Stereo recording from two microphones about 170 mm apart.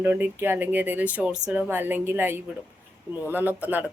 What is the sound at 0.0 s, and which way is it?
Speech, 10° right (ahead or behind).